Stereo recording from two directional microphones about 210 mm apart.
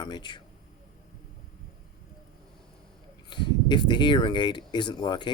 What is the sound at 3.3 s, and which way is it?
Speech, 20° left (ahead or behind).